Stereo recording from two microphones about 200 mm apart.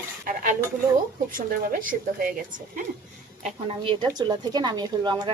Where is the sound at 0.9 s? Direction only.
45° right (ahead or behind).